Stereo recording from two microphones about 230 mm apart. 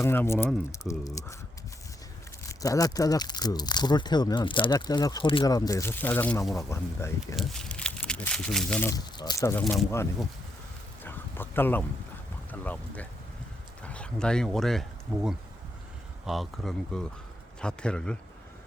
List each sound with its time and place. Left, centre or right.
0.0 s speech: centre
2.4 s speech: centre
9.1 s speech: centre
11.0 s bow-wow: centre
12.5 s speech: centre